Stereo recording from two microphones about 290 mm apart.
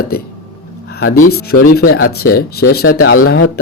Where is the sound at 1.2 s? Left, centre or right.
Left.